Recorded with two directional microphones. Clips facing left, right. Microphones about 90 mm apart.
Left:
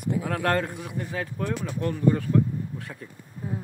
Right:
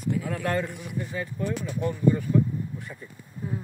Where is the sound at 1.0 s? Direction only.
75° left (ahead or behind).